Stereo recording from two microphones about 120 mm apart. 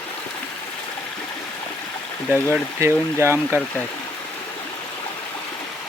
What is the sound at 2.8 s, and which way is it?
Speech, 20° right (ahead or behind).